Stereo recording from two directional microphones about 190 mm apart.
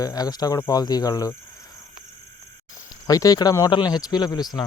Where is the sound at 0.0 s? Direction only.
20° left (ahead or behind).